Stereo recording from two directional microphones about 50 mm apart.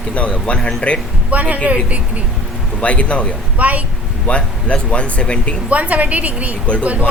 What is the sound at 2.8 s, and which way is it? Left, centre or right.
Speech, left.